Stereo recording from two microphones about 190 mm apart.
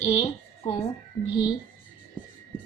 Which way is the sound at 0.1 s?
35° left (ahead or behind).